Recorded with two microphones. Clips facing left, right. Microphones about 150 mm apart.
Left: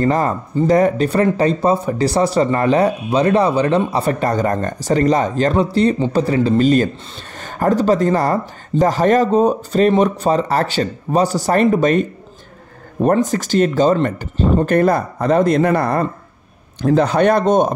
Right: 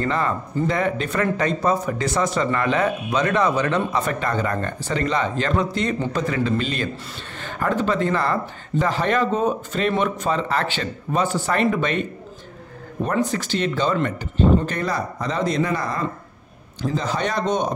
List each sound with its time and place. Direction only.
0.0 s speech: 40° left (ahead or behind)
13.1 s speech: 45° left (ahead or behind)
14.6 s speech: 50° left (ahead or behind)